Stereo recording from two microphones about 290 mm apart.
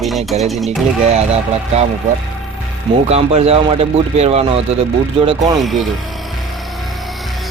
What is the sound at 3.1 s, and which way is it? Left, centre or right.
Speech, right.